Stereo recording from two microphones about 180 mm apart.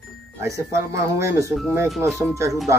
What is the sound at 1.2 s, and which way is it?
A man's voice, 15° right (ahead or behind).